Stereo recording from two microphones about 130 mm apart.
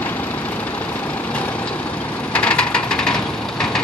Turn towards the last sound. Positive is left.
turn(degrees=5)  # may be behind; listen again after turning